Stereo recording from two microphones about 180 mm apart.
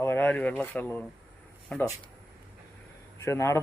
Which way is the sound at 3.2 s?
15° left (ahead or behind).